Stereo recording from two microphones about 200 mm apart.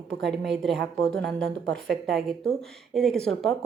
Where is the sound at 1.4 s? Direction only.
60° right (ahead or behind).